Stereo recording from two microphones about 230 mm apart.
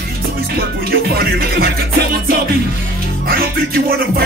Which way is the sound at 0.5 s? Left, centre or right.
Right.